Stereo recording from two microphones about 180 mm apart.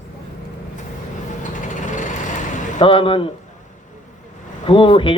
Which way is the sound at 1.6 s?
45° left (ahead or behind).